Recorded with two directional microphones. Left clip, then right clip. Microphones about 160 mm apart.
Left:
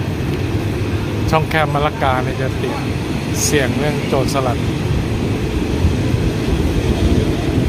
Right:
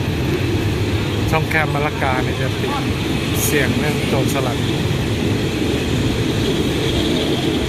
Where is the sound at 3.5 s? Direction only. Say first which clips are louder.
Left 2 dB; 25° left (ahead or behind).